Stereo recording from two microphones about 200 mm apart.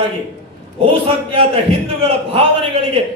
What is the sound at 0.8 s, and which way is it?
A man's voice, 30° right (ahead or behind).